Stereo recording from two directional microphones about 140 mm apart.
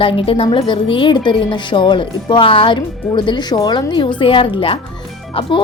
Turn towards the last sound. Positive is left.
turn(degrees=35)  # may be behind; listen again after turning